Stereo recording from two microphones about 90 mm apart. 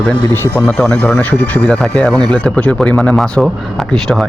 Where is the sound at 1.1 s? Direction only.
20° left (ahead or behind).